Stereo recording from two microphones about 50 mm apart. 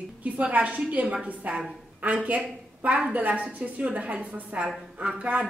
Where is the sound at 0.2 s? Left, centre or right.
Right.